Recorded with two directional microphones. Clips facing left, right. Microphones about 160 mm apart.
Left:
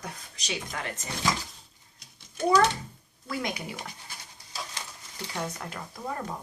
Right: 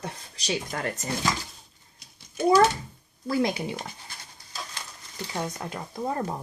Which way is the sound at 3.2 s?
35° right (ahead or behind).